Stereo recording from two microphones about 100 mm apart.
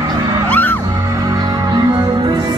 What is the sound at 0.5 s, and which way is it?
Music, 15° left (ahead or behind).